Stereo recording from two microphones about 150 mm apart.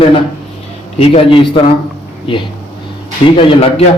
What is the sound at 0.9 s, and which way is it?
Speech, 40° left (ahead or behind).